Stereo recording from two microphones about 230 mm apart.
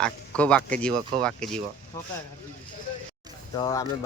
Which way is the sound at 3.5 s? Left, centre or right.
Centre.